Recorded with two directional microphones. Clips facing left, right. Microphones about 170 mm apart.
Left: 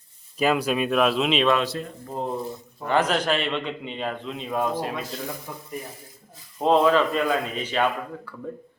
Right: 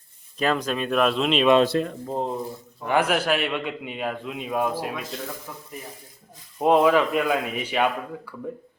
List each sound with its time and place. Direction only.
0.3 s speech: 10° left (ahead or behind)
1.6 s speech: 65° right (ahead or behind)
2.0 s a man's voice: 20° right (ahead or behind)
6.6 s a man's voice: 10° right (ahead or behind)